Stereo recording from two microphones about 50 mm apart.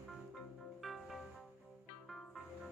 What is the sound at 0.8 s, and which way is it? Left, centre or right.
Music, centre.